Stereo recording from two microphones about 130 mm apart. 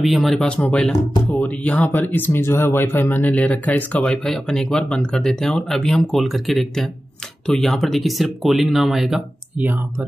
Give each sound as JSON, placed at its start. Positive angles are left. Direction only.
{"t": 0.0, "sound": "speech", "side_deg": 0}
{"t": 9.6, "sound": "speech", "side_deg": -15}